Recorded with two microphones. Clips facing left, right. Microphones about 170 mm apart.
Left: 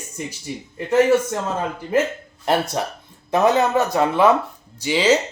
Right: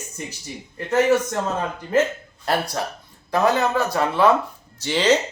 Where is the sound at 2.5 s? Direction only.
20° left (ahead or behind).